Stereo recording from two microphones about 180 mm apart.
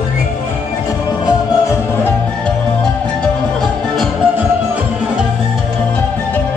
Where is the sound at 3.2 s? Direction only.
Centre (ahead or behind).